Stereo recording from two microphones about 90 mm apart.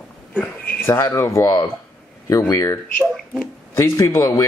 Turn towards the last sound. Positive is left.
turn(degrees=35)  # may be behind; listen again after turning